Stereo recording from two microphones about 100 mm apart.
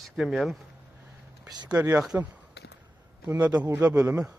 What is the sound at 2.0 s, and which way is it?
Speech, 10° right (ahead or behind).